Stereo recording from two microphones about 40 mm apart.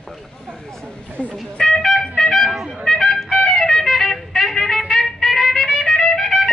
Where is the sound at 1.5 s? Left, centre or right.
Centre.